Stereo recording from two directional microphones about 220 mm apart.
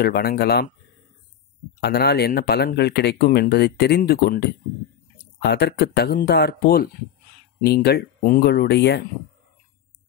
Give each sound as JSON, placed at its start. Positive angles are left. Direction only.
{"t": 0.0, "sound": "speech", "side_deg": 45}
{"t": 1.8, "sound": "speech", "side_deg": 45}